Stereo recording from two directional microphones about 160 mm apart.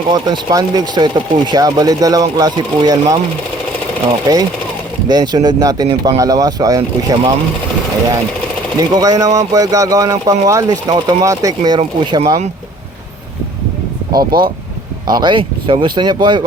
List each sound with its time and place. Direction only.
0.1 s speech: 25° right (ahead or behind)
4.3 s speech: 25° right (ahead or behind)
8.9 s speech: 25° right (ahead or behind)
11.8 s speech: 40° right (ahead or behind)
14.3 s speech: 65° right (ahead or behind)
15.1 s speech: 30° right (ahead or behind)